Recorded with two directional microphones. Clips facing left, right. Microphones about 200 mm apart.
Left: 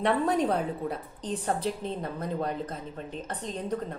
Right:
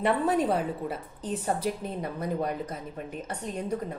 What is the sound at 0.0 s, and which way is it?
A woman's voice, 5° right (ahead or behind).